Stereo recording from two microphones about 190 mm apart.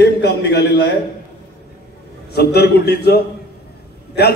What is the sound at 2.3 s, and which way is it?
A man's voice, 55° left (ahead or behind).